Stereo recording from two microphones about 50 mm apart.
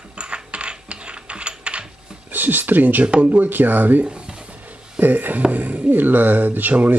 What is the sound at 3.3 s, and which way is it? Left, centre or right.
Speech, right.